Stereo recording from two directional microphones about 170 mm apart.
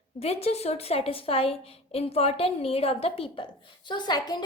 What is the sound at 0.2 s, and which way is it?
A woman's voice, 35° left (ahead or behind).